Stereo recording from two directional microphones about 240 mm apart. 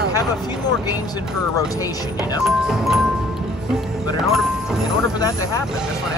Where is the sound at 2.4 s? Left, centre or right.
Centre.